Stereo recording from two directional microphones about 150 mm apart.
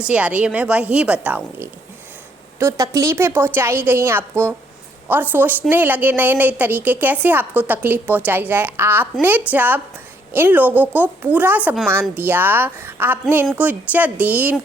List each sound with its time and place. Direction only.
0.1 s a woman's voice: 10° right (ahead or behind)
2.6 s a woman's voice: 20° right (ahead or behind)
5.3 s a woman's voice: 10° right (ahead or behind)